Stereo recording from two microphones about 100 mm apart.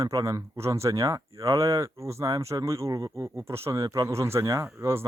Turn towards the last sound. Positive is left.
turn(degrees=-25)  # may be behind; listen again after turning